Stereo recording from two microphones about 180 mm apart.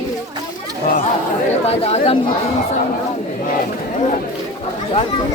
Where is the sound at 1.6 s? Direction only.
35° left (ahead or behind).